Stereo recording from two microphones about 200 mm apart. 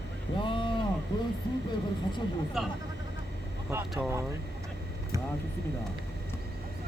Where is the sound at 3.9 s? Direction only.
10° right (ahead or behind).